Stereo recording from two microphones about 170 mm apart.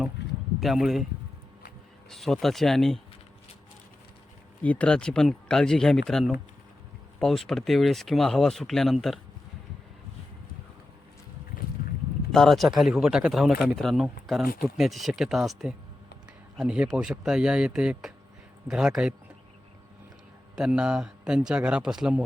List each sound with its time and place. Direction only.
0.6 s speech: centre (ahead or behind)
2.0 s speech: centre (ahead or behind)
4.6 s speech: 10° left (ahead or behind)
12.3 s speech: centre (ahead or behind)
20.6 s speech: 5° right (ahead or behind)